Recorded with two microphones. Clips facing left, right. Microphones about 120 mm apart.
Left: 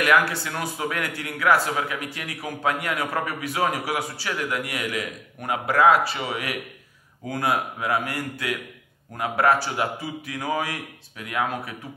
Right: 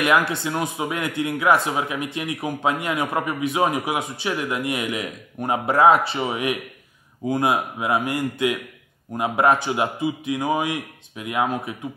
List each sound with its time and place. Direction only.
0.3 s a man's voice: 20° right (ahead or behind)